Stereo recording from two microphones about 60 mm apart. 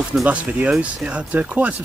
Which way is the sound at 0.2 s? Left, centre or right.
Right.